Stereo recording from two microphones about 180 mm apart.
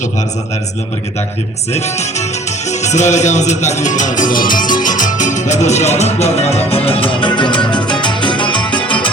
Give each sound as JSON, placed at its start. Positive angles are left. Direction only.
{"t": 1.7, "sound": "music", "side_deg": 40}